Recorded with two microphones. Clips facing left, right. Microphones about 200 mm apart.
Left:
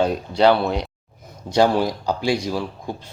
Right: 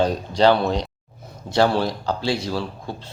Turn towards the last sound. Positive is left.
turn(degrees=15)  # may be behind; listen again after turning